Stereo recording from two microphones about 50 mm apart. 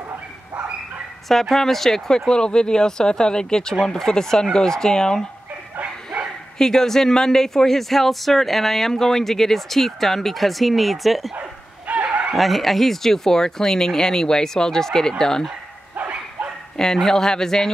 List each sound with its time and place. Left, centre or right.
1.3 s speech: centre
6.6 s speech: centre
11.9 s fowl: right
12.4 s speech: centre
16.0 s bow-wow: right
16.7 s speech: centre